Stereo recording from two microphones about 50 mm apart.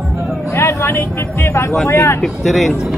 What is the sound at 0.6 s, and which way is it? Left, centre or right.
Speech, left.